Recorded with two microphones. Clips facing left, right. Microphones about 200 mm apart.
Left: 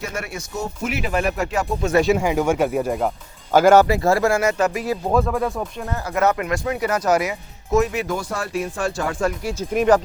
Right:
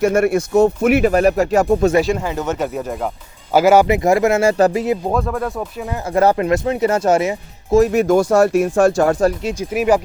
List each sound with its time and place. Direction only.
0.0 s speech: 50° right (ahead or behind)
2.0 s speech: centre (ahead or behind)
3.5 s speech: 10° right (ahead or behind)
3.8 s speech: 20° right (ahead or behind)
5.1 s speech: centre (ahead or behind)
6.1 s speech: 30° right (ahead or behind)
7.9 s speech: 45° right (ahead or behind)
9.4 s speech: 20° right (ahead or behind)
9.7 s speech: 10° right (ahead or behind)